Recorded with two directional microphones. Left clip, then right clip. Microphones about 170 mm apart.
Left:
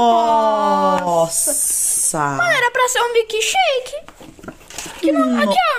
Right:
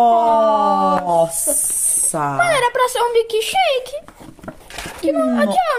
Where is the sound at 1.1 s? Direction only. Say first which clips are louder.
Right 1 dB; 20° left (ahead or behind).